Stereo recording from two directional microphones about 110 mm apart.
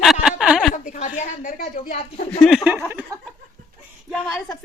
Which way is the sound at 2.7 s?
20° right (ahead or behind).